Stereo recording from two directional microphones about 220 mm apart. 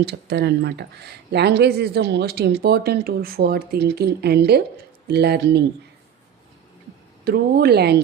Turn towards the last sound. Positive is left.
turn(degrees=-45)  # may be behind; listen again after turning